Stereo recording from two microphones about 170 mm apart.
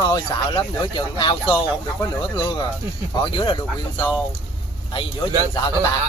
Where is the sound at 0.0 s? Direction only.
25° left (ahead or behind).